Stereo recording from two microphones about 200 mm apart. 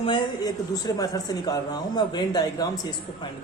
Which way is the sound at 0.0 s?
20° left (ahead or behind).